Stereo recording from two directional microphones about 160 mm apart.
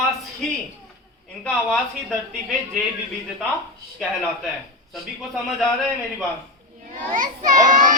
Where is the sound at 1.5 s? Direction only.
5° left (ahead or behind).